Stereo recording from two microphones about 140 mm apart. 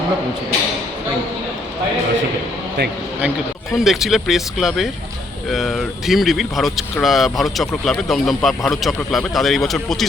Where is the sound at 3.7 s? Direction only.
Centre (ahead or behind).